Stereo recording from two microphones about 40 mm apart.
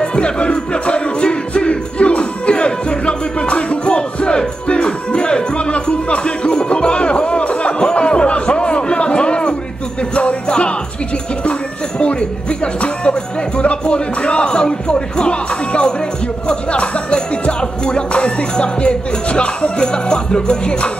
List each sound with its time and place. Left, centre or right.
0.0 s music: left
10.1 s jingle bell: left
12.0 s music: left